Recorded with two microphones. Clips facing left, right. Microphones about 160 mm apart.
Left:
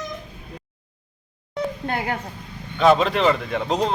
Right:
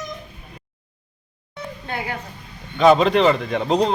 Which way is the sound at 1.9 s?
50° left (ahead or behind).